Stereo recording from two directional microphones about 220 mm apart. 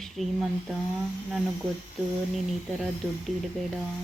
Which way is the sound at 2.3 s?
Centre (ahead or behind).